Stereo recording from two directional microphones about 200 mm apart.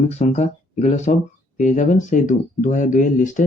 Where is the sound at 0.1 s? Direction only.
35° left (ahead or behind).